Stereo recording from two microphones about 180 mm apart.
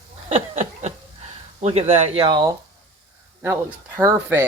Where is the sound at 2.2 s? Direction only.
25° right (ahead or behind).